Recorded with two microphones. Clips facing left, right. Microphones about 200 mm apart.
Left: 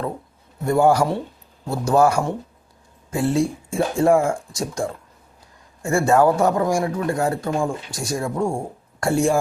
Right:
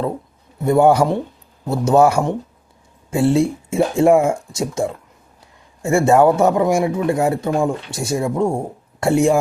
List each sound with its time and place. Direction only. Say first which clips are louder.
0.6 s speech: right 4 dB; 20° right (ahead or behind)